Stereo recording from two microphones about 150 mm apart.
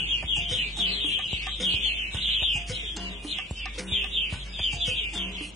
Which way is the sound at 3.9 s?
Centre (ahead or behind).